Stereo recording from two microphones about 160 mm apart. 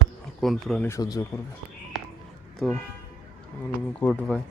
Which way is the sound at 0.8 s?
20° left (ahead or behind).